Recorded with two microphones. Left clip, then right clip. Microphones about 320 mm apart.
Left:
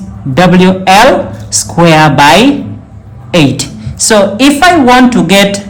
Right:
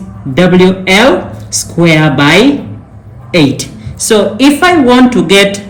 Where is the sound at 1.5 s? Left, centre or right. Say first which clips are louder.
Left 3 dB; left.